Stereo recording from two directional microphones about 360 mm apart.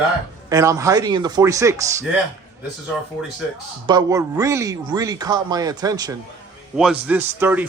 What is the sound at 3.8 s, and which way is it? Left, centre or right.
A man's voice, centre.